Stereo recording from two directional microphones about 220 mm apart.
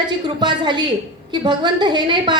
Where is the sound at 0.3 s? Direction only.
20° right (ahead or behind).